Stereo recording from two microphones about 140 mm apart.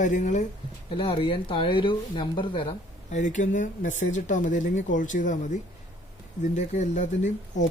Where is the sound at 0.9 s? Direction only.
40° left (ahead or behind).